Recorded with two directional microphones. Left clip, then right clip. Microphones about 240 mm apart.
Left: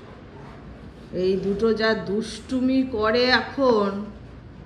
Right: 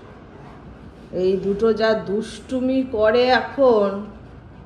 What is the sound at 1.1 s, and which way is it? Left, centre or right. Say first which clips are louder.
Speech: right 3 dB; centre.